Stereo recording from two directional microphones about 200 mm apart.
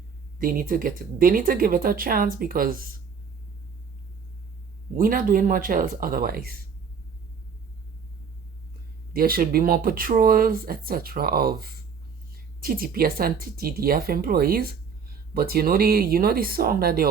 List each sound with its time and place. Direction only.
0.3 s speech: 45° right (ahead or behind)
4.9 s speech: 45° right (ahead or behind)
9.1 s speech: 45° right (ahead or behind)